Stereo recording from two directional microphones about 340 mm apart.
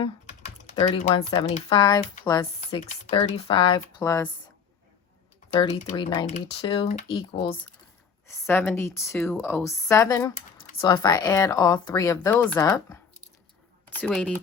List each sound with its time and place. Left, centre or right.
0.0 s typing: left
1.1 s speech: centre
5.5 s speech: centre